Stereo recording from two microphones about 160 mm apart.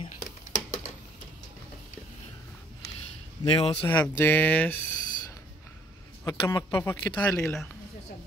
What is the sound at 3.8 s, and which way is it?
Speech, 10° left (ahead or behind).